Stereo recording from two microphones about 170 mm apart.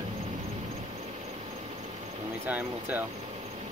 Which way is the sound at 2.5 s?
10° right (ahead or behind).